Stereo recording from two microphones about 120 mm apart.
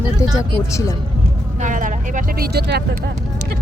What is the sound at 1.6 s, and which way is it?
Vehicle, 90° right.